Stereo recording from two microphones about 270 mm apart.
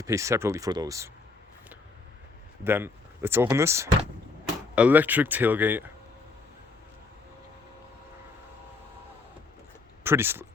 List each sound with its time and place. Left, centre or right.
0.0 s speech: centre
2.6 s speech: centre
10.0 s speech: centre